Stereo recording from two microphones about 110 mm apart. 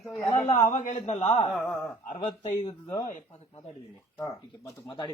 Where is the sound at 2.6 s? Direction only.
35° left (ahead or behind).